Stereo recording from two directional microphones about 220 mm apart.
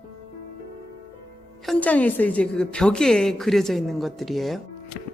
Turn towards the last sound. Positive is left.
turn(degrees=0)  # may be behind; listen again after turning